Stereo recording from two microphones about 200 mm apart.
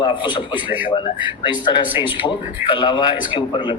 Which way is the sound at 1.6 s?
25° left (ahead or behind).